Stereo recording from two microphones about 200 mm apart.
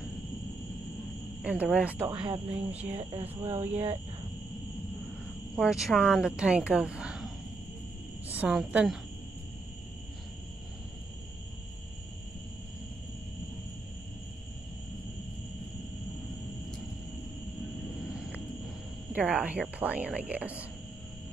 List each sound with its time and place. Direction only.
1.4 s speech: 5° right (ahead or behind)
2.2 s speech: 30° right (ahead or behind)
5.6 s a woman's voice: centre (ahead or behind)
19.1 s a woman's voice: 5° right (ahead or behind)